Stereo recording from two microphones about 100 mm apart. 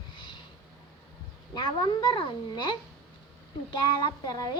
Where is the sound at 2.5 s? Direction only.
50° left (ahead or behind).